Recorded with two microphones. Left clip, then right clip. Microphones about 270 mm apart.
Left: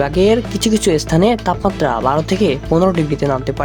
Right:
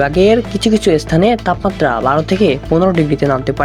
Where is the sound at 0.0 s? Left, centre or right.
Centre.